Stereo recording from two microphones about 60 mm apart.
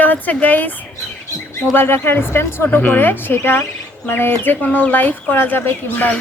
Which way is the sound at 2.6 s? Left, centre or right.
Left.